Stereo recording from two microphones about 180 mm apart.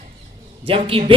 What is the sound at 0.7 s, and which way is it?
Speech, 30° right (ahead or behind).